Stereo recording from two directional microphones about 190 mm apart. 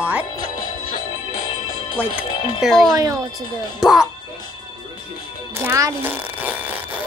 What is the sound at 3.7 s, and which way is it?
Speech, centre (ahead or behind).